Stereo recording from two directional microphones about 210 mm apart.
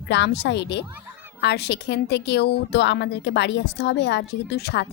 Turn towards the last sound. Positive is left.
turn(degrees=50)  # may be behind; listen again after turning